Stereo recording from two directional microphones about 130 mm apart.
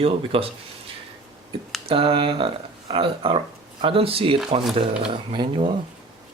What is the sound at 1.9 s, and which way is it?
Speech, 45° right (ahead or behind).